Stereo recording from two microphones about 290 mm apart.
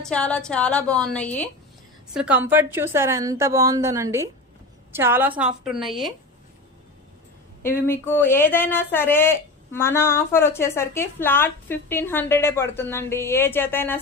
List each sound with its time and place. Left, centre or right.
0.0 s a woman's voice: centre
7.6 s speech: centre